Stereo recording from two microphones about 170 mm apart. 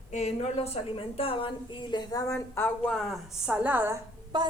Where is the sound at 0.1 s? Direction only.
40° left (ahead or behind); by 4.0 s 15° right (ahead or behind).